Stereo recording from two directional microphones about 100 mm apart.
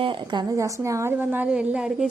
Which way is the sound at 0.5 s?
30° right (ahead or behind).